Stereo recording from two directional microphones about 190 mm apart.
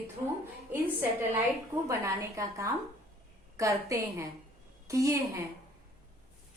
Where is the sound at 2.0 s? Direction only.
15° right (ahead or behind).